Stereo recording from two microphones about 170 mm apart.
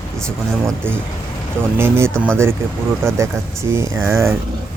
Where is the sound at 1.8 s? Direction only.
15° right (ahead or behind).